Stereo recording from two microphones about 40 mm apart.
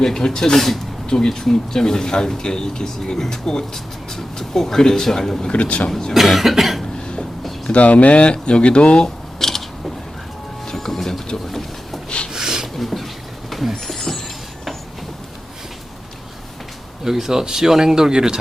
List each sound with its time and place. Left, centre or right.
0.0 s speech: centre
5.5 s speech: left
6.1 s cough: centre
7.7 s speech: left
9.4 s mechanisms: centre
10.7 s train: centre
12.0 s a sound: left
12.3 s a sound: centre
12.7 s beatboxing: centre
13.5 s a sound: centre
17.0 s speech: centre